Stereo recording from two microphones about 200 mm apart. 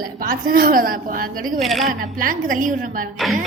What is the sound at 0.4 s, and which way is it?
Speech, 45° right (ahead or behind).